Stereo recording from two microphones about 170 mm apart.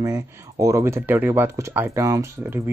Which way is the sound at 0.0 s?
20° right (ahead or behind).